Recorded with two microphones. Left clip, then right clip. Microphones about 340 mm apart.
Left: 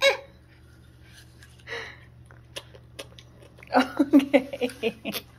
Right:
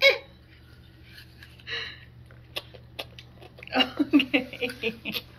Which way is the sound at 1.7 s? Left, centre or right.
Centre.